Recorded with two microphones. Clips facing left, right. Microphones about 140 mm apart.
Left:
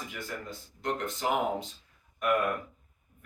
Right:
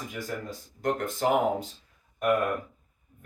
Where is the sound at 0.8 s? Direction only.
45° right (ahead or behind).